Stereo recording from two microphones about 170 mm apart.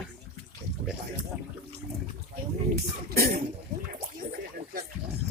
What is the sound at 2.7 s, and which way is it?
Speech, 65° right (ahead or behind).